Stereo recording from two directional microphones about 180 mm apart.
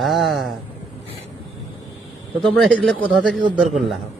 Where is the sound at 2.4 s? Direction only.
Centre (ahead or behind).